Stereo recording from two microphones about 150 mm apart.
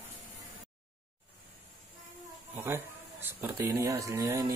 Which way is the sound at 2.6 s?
15° right (ahead or behind).